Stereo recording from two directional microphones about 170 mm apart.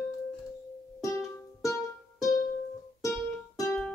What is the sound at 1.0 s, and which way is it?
Music, 20° left (ahead or behind).